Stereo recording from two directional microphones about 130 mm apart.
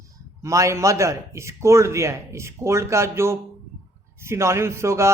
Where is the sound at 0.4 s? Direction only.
25° right (ahead or behind).